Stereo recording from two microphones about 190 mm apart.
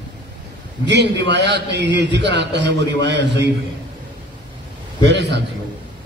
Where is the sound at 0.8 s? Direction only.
65° right (ahead or behind).